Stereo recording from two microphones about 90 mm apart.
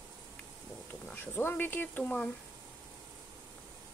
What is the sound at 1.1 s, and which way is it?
Speech, 20° left (ahead or behind).